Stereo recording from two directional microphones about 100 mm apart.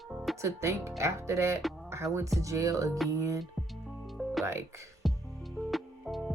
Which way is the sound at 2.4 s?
30° right (ahead or behind).